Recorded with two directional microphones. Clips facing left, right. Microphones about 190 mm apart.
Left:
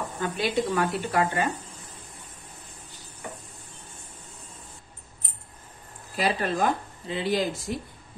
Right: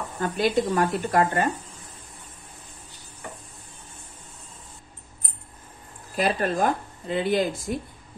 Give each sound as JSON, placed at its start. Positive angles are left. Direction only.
{"t": 0.2, "sound": "speech", "side_deg": -45}
{"t": 6.1, "sound": "speech", "side_deg": -45}